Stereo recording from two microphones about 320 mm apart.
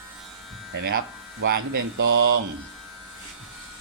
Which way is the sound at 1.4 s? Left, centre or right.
Right.